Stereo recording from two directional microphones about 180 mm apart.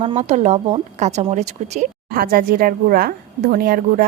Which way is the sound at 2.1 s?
55° right (ahead or behind).